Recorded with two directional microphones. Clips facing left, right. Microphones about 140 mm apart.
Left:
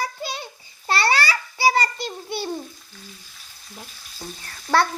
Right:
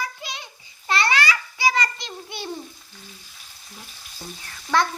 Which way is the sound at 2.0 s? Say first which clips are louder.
Left 5 dB; 35° left (ahead or behind).